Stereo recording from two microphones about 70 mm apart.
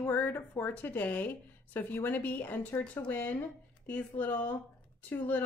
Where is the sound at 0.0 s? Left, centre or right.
Left.